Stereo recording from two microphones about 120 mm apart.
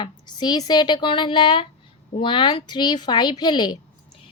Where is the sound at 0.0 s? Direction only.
40° left (ahead or behind).